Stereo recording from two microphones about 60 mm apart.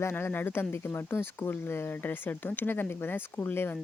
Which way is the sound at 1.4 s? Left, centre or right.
Left.